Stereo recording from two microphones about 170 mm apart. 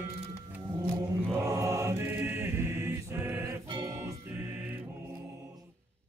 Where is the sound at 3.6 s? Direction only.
20° right (ahead or behind).